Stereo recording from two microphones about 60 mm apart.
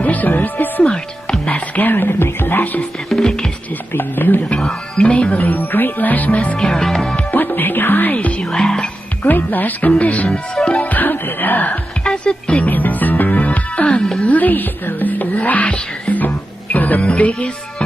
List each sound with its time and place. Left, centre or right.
0.0 s music: left
1.4 s speech: left
3.1 s speech: centre
3.9 s speech: left
4.6 s music: centre
5.1 s music: left; by 7.2 s centre
7.2 s music: left
8.5 s music: centre
9.3 s music: left
10.3 s speech: centre
10.9 s music: left
12.0 s speech: centre
12.7 s music: left